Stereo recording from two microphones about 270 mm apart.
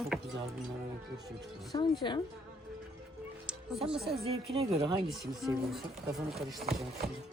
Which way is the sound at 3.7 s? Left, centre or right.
Centre.